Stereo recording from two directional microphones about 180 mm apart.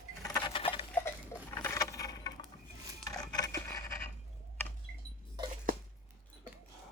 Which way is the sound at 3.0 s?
20° left (ahead or behind).